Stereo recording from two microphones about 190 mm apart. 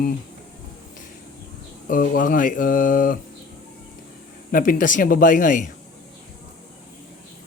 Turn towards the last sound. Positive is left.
turn(degrees=40)  # may be behind; listen again after turning